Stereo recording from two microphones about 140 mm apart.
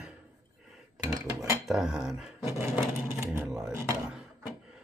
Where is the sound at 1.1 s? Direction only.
20° right (ahead or behind).